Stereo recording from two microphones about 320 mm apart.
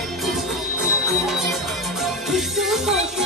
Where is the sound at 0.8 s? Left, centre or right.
Centre.